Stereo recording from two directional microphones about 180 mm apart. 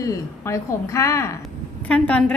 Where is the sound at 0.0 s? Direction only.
15° left (ahead or behind).